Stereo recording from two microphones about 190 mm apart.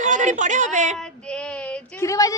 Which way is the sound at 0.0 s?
40° right (ahead or behind).